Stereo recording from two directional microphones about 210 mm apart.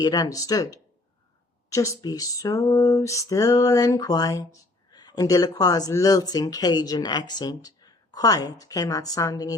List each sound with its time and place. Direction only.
0.0 s speech: 20° left (ahead or behind)